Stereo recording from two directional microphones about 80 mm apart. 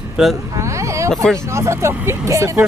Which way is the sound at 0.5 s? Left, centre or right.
Right.